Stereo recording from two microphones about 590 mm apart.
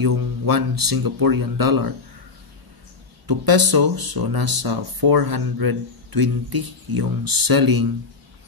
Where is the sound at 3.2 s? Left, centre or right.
Right.